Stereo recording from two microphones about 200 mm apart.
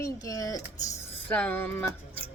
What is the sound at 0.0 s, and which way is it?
Speech, 15° left (ahead or behind).